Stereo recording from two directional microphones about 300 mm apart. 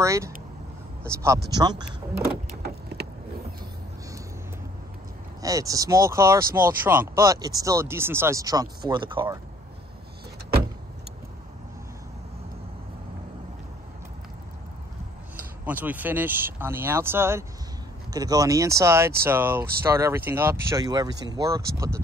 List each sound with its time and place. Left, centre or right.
0.0 s speech: centre
2.6 s vehicle: right
5.4 s speech: centre
15.6 s speech: centre